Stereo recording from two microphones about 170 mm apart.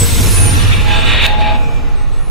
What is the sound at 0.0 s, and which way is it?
Vehicle, centre (ahead or behind).